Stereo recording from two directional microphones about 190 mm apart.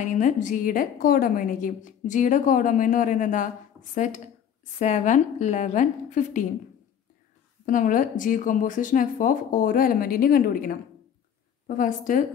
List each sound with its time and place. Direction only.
0.0 s a woman's voice: 40° left (ahead or behind)
7.6 s a woman's voice: 45° left (ahead or behind)